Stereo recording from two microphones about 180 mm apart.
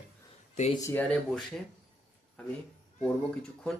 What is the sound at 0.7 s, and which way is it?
Speech, 15° left (ahead or behind).